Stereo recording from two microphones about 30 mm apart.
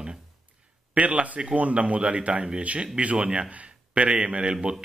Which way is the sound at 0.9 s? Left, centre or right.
Right.